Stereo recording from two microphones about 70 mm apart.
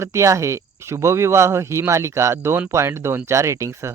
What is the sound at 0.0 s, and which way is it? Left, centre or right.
Speech, right.